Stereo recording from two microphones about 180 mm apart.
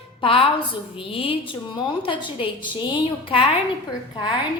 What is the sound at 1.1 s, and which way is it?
A woman's voice, 30° left (ahead or behind).